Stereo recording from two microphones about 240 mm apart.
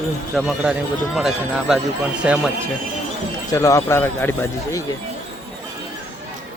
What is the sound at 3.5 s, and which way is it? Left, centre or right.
Speech, centre.